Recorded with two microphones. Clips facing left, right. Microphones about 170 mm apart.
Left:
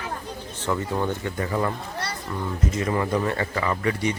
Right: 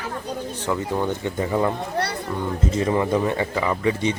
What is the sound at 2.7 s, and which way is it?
A man's voice, 25° right (ahead or behind).